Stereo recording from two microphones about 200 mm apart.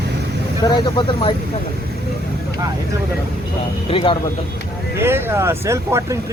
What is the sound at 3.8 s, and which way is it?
Speech, 25° left (ahead or behind).